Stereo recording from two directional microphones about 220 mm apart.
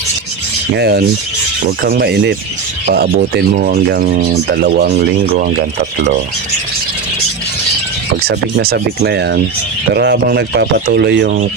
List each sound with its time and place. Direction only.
0.8 s speech: 45° right (ahead or behind)
8.5 s speech: 45° right (ahead or behind)